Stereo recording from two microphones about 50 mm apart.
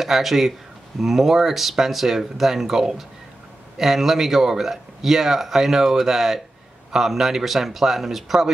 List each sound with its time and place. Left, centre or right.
0.0 s speech: centre